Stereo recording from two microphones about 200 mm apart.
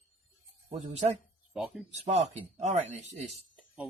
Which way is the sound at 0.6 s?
35° right (ahead or behind).